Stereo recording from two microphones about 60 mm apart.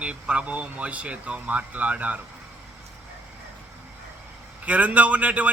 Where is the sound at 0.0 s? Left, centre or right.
Centre.